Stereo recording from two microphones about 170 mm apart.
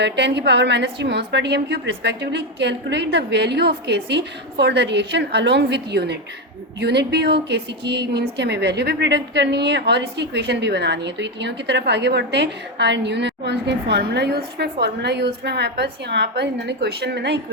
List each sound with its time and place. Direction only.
0.0 s a woman's voice: 90° right